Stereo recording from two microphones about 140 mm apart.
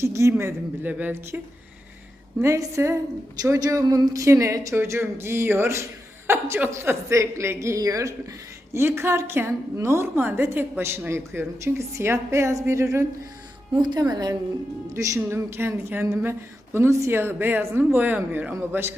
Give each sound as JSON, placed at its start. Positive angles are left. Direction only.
{"t": 0.0, "sound": "a woman's voice", "side_deg": -20}
{"t": 2.4, "sound": "a woman's voice", "side_deg": -20}
{"t": 13.7, "sound": "a woman's voice", "side_deg": -30}